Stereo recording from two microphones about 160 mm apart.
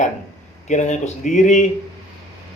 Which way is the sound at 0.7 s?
50° left (ahead or behind).